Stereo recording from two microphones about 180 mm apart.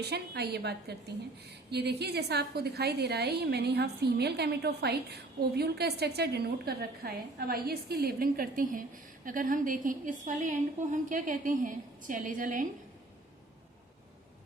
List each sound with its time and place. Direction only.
0.0 s a woman's voice: 65° right (ahead or behind); by 12.6 s 45° right (ahead or behind)